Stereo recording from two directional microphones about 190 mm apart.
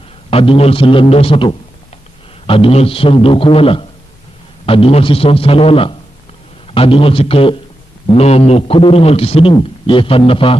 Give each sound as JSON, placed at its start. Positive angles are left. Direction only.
{"t": 0.3, "sound": "a man's voice", "side_deg": 30}